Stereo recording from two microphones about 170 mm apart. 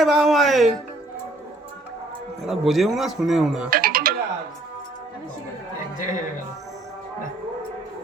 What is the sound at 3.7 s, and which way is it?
Music, 60° right (ahead or behind).